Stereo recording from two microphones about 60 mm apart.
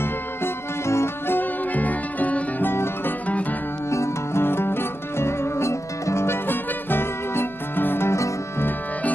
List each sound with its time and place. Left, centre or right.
0.0 s music: left
2.7 s music: left
8.1 s music: left